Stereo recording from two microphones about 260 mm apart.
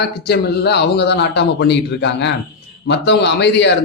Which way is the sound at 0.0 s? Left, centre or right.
Left.